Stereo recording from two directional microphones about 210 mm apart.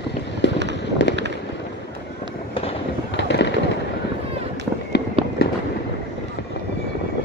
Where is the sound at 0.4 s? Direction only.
55° left (ahead or behind).